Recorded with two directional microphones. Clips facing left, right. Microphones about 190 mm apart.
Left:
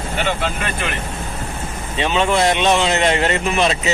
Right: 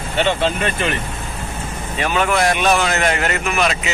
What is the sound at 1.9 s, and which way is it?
A man's voice, 25° left (ahead or behind).